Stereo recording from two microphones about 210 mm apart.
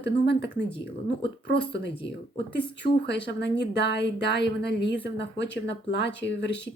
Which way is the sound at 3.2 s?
55° left (ahead or behind).